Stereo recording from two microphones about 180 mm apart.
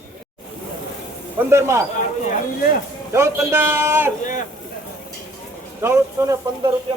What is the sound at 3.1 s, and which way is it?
A man's voice, 15° right (ahead or behind).